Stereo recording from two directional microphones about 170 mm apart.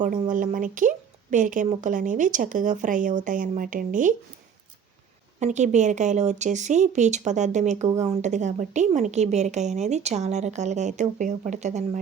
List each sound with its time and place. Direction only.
0.0 s a woman's voice: 50° right (ahead or behind)
5.4 s a woman's voice: 45° right (ahead or behind)